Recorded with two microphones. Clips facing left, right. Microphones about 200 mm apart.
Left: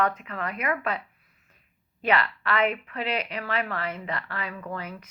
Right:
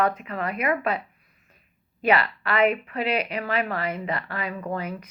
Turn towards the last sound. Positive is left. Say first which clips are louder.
# right 5 dB
turn(degrees=-25)  # may be behind; listen again after turning